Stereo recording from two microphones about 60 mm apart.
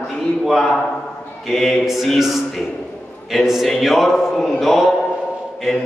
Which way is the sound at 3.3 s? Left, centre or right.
Centre.